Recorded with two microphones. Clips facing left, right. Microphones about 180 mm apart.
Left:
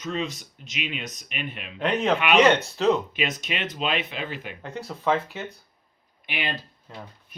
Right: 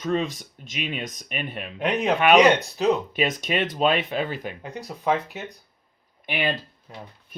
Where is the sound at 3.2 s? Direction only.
45° right (ahead or behind).